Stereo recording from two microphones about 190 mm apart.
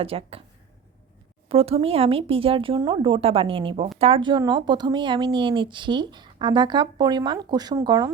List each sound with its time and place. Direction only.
0.0 s speech: 30° right (ahead or behind)
1.5 s speech: 30° right (ahead or behind)